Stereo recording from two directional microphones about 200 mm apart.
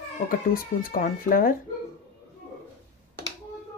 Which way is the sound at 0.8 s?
45° left (ahead or behind).